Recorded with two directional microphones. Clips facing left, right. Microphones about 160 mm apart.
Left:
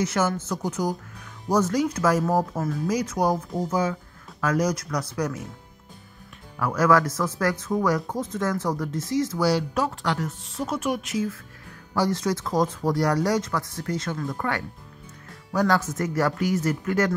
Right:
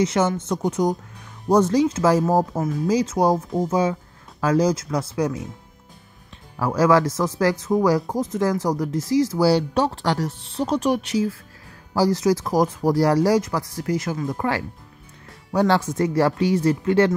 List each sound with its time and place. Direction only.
0.0 s speech: 25° right (ahead or behind)
6.6 s speech: 30° right (ahead or behind)
8.9 s speech: 25° left (ahead or behind)
9.3 s speech: 30° right (ahead or behind)